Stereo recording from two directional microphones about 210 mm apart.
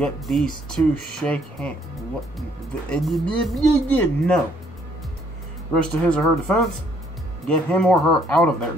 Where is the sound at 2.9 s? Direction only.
Centre (ahead or behind).